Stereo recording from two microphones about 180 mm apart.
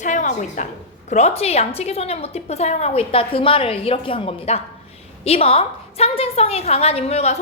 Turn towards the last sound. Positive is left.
turn(degrees=35)  # may be behind; listen again after turning